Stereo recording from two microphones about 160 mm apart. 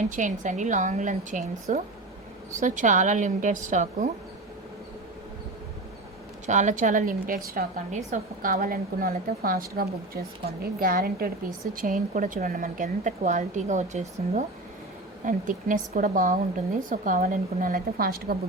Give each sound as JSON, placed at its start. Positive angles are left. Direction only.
{"t": 0.1, "sound": "a woman's voice", "side_deg": -50}
{"t": 6.4, "sound": "a woman's voice", "side_deg": -50}
{"t": 11.7, "sound": "a woman's voice", "side_deg": -55}